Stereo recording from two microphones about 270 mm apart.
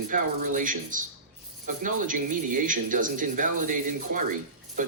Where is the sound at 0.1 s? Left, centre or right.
Right.